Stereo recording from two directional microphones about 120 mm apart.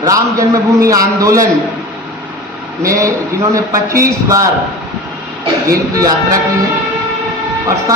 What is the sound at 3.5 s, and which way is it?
Speech, 25° right (ahead or behind).